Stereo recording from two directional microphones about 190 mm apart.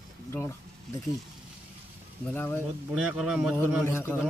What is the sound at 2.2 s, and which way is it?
Speech, 10° left (ahead or behind).